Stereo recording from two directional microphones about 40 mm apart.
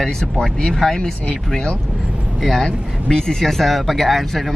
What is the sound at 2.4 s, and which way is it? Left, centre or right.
Speech, centre.